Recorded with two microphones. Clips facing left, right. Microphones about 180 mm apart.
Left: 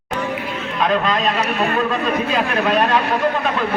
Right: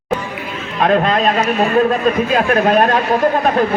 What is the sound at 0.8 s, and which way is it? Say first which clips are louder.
Speech: right 5 dB; 45° right (ahead or behind).